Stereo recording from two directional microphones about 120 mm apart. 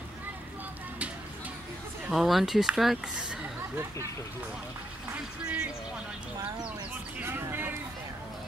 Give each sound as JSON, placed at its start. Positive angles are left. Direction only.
{"t": 2.0, "sound": "speech", "side_deg": 0}
{"t": 5.1, "sound": "speech", "side_deg": -15}
{"t": 7.2, "sound": "a sound", "side_deg": -20}